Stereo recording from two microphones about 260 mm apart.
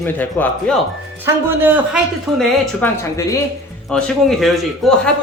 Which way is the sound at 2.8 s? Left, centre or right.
Centre.